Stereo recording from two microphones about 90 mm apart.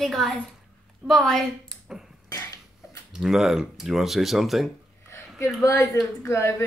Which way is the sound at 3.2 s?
5° right (ahead or behind).